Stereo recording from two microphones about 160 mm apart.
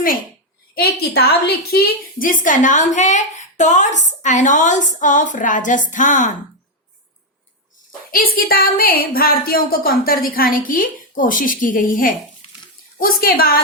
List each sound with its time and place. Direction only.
0.7 s a woman's voice: 75° left (ahead or behind); by 6.3 s 50° left (ahead or behind)
8.1 s a woman's voice: 65° left (ahead or behind)